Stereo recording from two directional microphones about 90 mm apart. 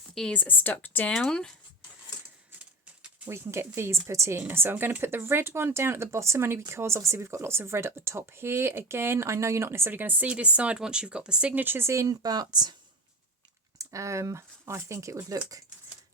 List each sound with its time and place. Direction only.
0.1 s speech: 5° left (ahead or behind)
0.3 s speech: 20° left (ahead or behind)
1.1 s speech: 5° left (ahead or behind)
2.5 s typewriter: 15° right (ahead or behind)
3.2 s speech: 30° right (ahead or behind); by 12.7 s 50° right (ahead or behind)
13.7 s speech: 35° right (ahead or behind)